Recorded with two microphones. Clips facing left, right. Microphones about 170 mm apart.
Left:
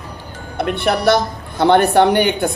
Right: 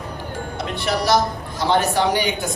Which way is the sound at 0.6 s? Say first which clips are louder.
Left 7 dB; 60° left (ahead or behind).